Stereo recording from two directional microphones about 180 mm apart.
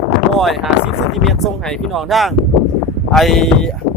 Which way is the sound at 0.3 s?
Centre (ahead or behind).